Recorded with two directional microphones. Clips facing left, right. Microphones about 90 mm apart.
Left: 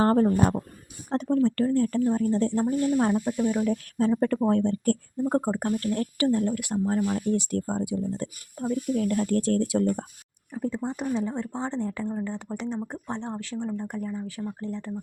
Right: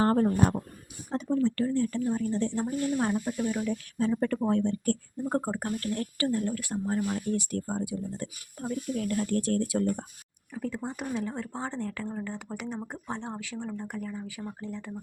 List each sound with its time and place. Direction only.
0.0 s speech: 30° left (ahead or behind)
1.1 s speech: 70° left (ahead or behind)
1.5 s speech: 45° left (ahead or behind)
3.2 s speech: 20° left (ahead or behind)
3.6 s speech: 40° left (ahead or behind)
5.3 s speech: 15° left (ahead or behind)
5.8 s speech: 35° left (ahead or behind)
9.2 s speech: 40° left (ahead or behind)
10.8 s speech: 5° right (ahead or behind)
12.5 s speech: 5° right (ahead or behind)
14.3 s speech: 10° right (ahead or behind)